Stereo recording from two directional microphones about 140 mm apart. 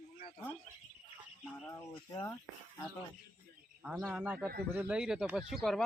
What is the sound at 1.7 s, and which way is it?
Speech, 25° left (ahead or behind).